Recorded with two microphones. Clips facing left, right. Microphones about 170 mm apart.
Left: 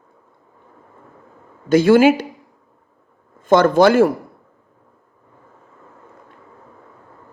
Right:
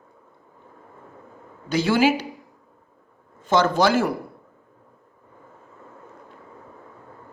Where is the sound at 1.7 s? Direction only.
50° left (ahead or behind).